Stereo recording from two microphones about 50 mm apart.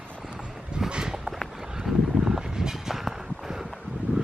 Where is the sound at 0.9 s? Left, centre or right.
Centre.